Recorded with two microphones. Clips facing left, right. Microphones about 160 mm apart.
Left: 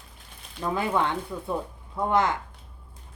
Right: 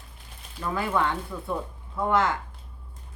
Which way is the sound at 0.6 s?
20° left (ahead or behind).